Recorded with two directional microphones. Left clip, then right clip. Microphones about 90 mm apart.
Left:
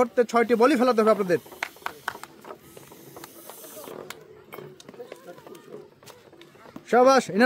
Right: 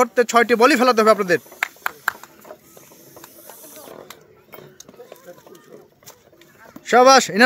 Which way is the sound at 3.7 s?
15° right (ahead or behind).